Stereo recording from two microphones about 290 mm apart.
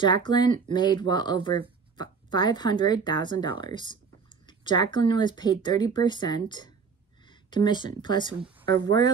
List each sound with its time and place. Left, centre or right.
0.0 s speech: centre